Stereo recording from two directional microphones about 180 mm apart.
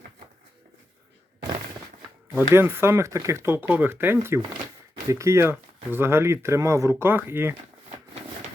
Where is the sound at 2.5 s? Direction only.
15° right (ahead or behind).